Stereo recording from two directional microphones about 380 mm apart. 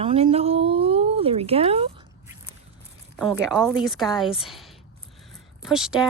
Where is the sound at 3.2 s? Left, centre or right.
Centre.